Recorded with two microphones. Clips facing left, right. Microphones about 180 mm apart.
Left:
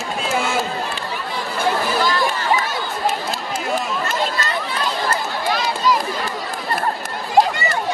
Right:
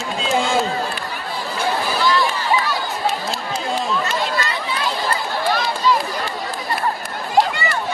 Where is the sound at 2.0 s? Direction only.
45° left (ahead or behind).